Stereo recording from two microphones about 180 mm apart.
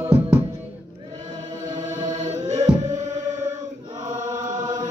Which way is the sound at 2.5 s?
40° right (ahead or behind).